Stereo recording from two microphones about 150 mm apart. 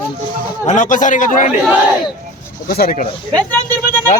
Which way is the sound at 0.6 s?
55° left (ahead or behind).